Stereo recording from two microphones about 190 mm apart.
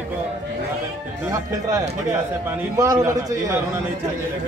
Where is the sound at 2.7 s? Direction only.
20° right (ahead or behind).